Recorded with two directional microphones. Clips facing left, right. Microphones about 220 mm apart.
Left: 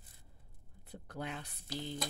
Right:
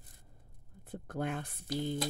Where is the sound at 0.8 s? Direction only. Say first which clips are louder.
Right 6 dB; 50° right (ahead or behind).